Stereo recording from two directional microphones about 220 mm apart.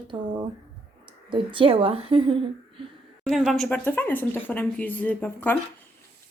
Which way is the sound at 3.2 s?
Centre (ahead or behind).